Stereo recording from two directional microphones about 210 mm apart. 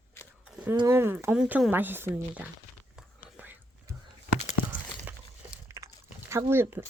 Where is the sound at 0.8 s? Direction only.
10° right (ahead or behind).